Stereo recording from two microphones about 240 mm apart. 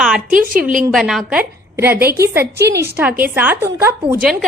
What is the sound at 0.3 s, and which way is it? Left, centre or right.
Speech, right.